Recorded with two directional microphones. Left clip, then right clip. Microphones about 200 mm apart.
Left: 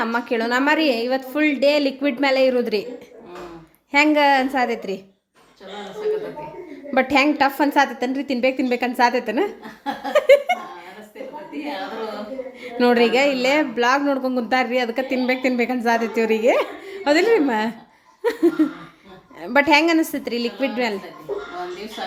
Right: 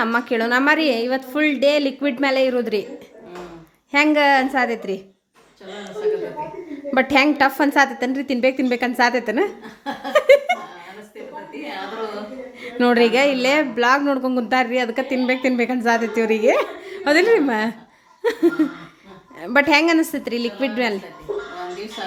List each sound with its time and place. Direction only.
0.0 s a woman's voice: 10° right (ahead or behind)
3.9 s a woman's voice: 5° right (ahead or behind)
6.9 s a woman's voice: 5° right (ahead or behind)
12.6 s a woman's voice: 5° right (ahead or behind)
18.2 s laughter: centre (ahead or behind)
19.4 s a woman's voice: 5° right (ahead or behind)
21.3 s a sound: 35° right (ahead or behind)